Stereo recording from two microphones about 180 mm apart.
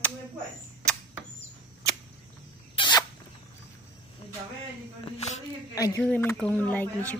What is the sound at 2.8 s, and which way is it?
Rodents, 25° left (ahead or behind).